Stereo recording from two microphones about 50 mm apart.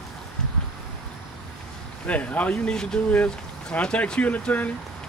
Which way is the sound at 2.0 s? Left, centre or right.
Left.